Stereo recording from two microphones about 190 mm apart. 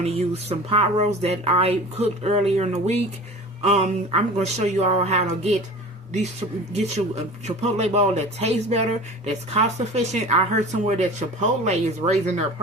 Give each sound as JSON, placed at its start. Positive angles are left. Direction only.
{"t": 0.0, "sound": "speech", "side_deg": -35}
{"t": 6.7, "sound": "speech", "side_deg": -35}